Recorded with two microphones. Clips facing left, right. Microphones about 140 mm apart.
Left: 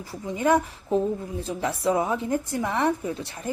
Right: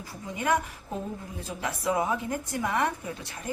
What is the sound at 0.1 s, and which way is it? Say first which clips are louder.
Speech: left 6 dB; 25° left (ahead or behind).